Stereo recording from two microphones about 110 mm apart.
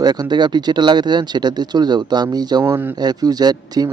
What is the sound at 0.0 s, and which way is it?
Speech, 40° right (ahead or behind).